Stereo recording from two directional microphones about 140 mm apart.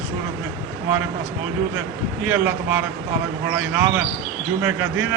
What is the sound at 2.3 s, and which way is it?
Speech, 15° right (ahead or behind).